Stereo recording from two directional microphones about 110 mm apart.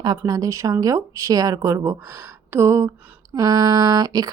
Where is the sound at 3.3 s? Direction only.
35° right (ahead or behind).